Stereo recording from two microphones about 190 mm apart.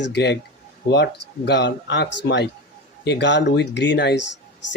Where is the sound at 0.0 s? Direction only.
60° left (ahead or behind).